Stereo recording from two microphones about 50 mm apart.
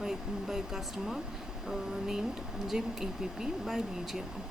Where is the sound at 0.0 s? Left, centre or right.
Centre.